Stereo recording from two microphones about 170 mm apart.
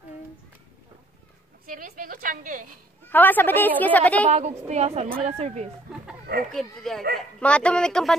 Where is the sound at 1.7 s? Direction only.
55° right (ahead or behind).